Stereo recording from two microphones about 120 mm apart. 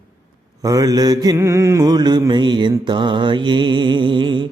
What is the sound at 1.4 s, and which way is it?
Music, 25° right (ahead or behind).